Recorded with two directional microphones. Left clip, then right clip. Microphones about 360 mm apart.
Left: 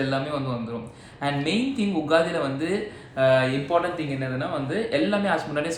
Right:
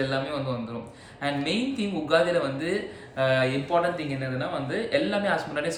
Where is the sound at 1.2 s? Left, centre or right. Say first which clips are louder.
Left 2 dB; centre.